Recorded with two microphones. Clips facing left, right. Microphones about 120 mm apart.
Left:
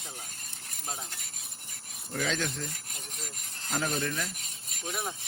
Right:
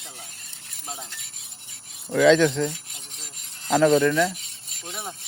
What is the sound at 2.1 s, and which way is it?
Speech, 90° right.